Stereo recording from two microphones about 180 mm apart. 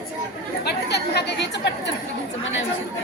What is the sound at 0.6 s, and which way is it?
Chatter, 65° left (ahead or behind).